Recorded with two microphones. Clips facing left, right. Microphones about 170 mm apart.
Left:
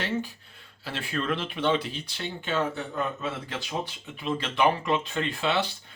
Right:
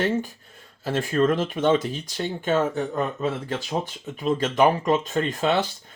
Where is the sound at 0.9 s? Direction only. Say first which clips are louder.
Right 9 dB; 45° right (ahead or behind).